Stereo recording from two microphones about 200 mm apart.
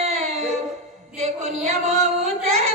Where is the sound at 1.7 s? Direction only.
35° right (ahead or behind).